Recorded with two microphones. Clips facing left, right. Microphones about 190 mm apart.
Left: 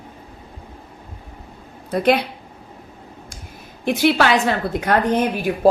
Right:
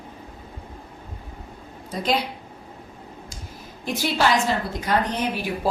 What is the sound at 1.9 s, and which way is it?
Speech, 60° left (ahead or behind).